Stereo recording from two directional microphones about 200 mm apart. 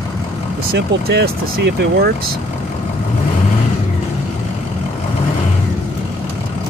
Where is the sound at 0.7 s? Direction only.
50° right (ahead or behind).